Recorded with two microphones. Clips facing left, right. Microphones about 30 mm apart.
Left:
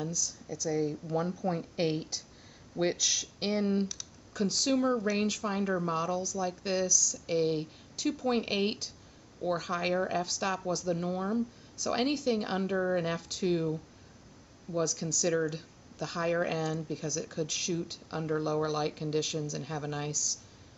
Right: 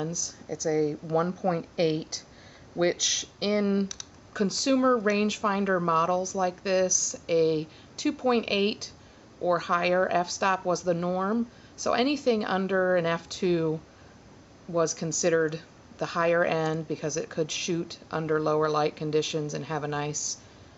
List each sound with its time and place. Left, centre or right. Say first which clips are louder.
0.1 s speech: right 2 dB; centre